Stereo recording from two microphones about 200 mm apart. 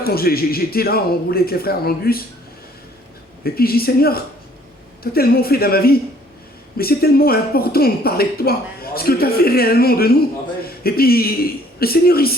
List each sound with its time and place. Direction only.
0.0 s speech: 50° left (ahead or behind)
3.4 s a man's voice: 50° left (ahead or behind)